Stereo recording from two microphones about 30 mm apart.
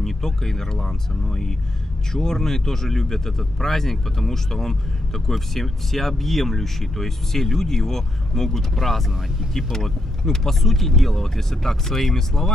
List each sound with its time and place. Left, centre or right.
0.0 s speech: centre
2.1 s speech: centre